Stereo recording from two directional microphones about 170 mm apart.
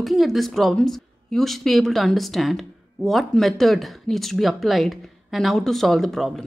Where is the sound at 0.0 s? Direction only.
Centre (ahead or behind).